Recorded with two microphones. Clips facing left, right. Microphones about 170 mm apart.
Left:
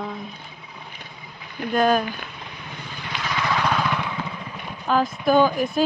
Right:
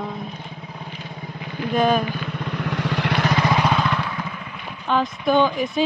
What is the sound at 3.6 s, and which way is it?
Vehicle, 5° right (ahead or behind).